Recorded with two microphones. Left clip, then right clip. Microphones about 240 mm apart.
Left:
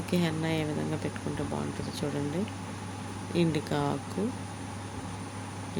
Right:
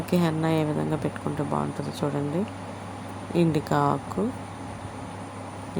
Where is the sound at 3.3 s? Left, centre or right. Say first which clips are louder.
Right 6 dB; centre.